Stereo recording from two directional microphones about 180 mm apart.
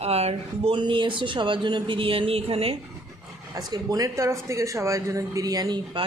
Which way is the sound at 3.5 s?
20° right (ahead or behind).